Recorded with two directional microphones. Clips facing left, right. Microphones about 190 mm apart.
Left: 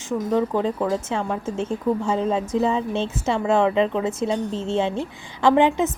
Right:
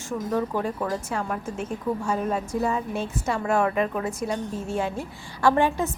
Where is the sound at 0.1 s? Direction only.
20° left (ahead or behind).